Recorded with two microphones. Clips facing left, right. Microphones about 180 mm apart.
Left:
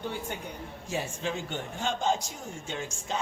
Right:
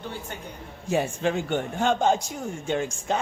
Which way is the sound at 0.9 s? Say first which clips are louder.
Right 8 dB; 60° right (ahead or behind).